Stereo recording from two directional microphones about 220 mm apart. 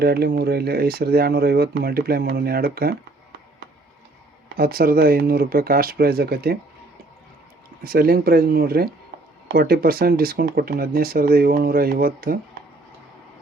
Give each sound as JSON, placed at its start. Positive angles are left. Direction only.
{"t": 0.0, "sound": "speech", "side_deg": -45}
{"t": 4.5, "sound": "speech", "side_deg": -40}
{"t": 7.9, "sound": "speech", "side_deg": -40}